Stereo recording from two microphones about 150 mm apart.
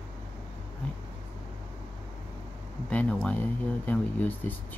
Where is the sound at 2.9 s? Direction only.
10° left (ahead or behind).